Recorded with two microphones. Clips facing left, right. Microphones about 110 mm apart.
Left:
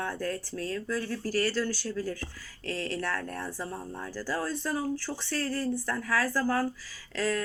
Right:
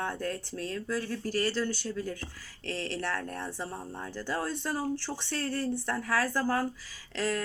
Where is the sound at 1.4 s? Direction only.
20° right (ahead or behind).